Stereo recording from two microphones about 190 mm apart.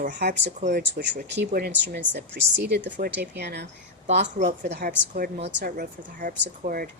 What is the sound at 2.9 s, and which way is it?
Speech, 50° right (ahead or behind).